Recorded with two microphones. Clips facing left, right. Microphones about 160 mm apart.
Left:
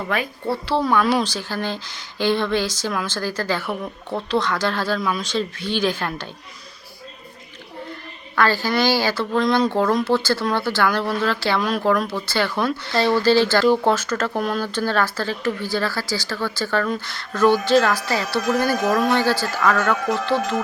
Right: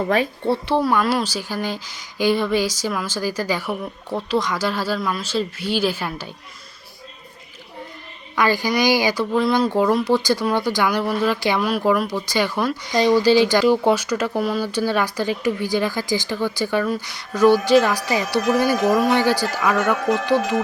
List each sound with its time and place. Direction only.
0.1 s speech: 30° right (ahead or behind)
0.8 s speech: 5° right (ahead or behind)
8.4 s speech: 15° right (ahead or behind)